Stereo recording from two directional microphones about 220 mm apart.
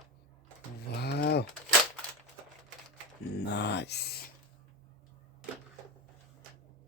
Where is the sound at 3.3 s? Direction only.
50° left (ahead or behind).